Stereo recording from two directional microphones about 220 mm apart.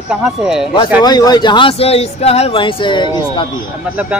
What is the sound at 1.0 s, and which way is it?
Speech, 20° left (ahead or behind).